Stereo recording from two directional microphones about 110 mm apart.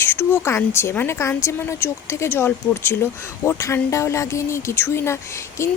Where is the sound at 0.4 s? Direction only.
25° left (ahead or behind).